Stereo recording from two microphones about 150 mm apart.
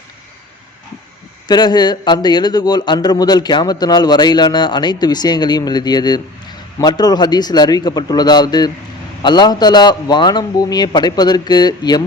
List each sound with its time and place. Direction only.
1.5 s a man's voice: 30° left (ahead or behind)